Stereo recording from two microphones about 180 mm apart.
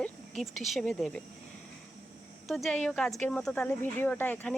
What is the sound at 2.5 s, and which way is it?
Speech, centre (ahead or behind).